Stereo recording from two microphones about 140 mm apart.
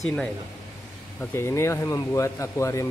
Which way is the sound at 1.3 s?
20° left (ahead or behind).